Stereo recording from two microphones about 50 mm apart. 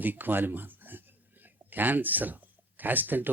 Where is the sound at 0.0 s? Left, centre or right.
Right.